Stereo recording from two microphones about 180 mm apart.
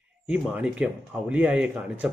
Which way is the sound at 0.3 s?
5° right (ahead or behind).